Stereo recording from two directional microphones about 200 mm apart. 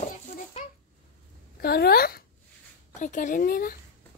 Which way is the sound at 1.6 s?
50° left (ahead or behind).